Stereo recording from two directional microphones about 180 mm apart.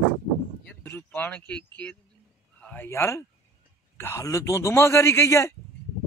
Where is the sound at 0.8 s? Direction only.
10° left (ahead or behind).